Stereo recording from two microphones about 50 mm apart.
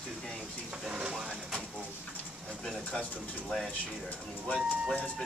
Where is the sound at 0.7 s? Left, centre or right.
Centre.